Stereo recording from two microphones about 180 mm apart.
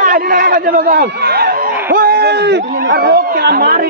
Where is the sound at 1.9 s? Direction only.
60° right (ahead or behind).